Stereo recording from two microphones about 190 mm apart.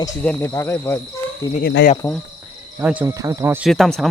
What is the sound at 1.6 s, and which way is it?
Speech, 65° left (ahead or behind).